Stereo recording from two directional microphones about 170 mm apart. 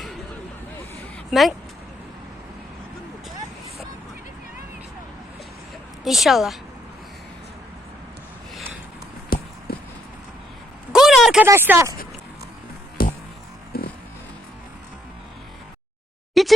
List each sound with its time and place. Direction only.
1.3 s speech: centre (ahead or behind)
6.1 s speech: centre (ahead or behind)
9.3 s clip-clop: 60° left (ahead or behind)
9.7 s vehicle: 65° left (ahead or behind)
10.9 s a sound: centre (ahead or behind)
11.4 s speech: 15° right (ahead or behind)
13.0 s music: 60° left (ahead or behind)
16.3 s a sound: centre (ahead or behind)